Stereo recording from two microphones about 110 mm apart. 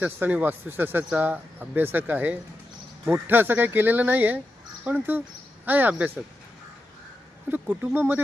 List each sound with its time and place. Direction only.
0.0 s speech: 15° right (ahead or behind)
7.5 s speech: 15° right (ahead or behind)